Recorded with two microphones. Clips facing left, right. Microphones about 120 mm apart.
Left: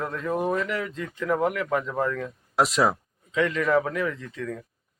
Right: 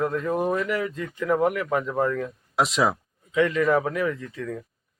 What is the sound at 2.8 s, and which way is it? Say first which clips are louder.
Speech: even; 5° right (ahead or behind).